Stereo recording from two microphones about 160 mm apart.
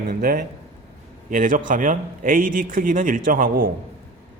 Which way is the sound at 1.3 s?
55° right (ahead or behind).